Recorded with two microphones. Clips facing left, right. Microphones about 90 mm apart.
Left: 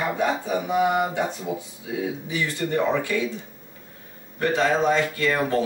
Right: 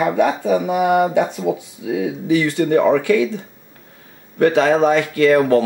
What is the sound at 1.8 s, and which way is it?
Speech, 85° right.